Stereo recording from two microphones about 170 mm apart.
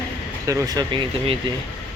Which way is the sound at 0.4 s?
20° right (ahead or behind).